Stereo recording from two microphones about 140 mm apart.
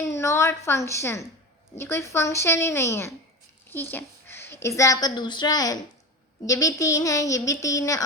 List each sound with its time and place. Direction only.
0.1 s a woman's voice: 20° left (ahead or behind)
3.9 s a sound: 15° left (ahead or behind)
4.8 s a woman's voice: 25° left (ahead or behind)